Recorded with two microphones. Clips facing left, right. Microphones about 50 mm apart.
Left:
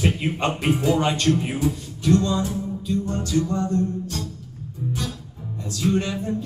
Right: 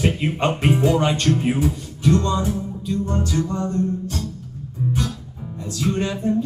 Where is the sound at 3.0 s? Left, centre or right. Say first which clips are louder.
Right 3 dB; centre.